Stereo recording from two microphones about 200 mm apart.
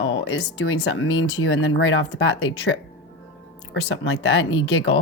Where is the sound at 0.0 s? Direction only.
70° left (ahead or behind).